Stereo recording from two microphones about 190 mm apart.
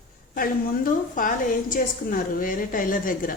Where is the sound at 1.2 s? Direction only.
45° left (ahead or behind).